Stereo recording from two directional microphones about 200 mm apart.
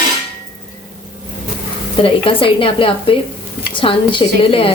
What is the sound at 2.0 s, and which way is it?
Speech, 25° left (ahead or behind).